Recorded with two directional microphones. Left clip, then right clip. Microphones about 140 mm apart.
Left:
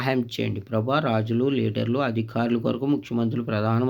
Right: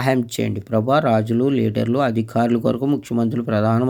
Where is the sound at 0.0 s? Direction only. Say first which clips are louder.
Right 5 dB; 50° right (ahead or behind).